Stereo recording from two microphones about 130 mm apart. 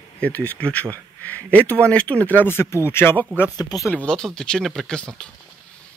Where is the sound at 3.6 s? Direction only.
30° left (ahead or behind).